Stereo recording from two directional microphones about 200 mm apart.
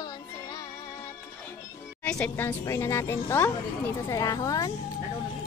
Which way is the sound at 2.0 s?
10° left (ahead or behind).